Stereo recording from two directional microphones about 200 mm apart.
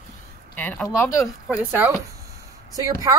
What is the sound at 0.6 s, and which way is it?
Speech, 10° left (ahead or behind).